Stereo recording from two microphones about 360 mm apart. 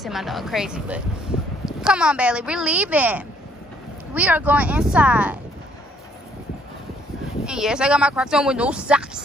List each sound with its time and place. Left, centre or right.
0.0 s speech: centre
7.4 s speech: centre